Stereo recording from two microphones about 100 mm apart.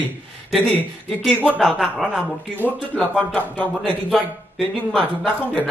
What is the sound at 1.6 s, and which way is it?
Speech, centre (ahead or behind).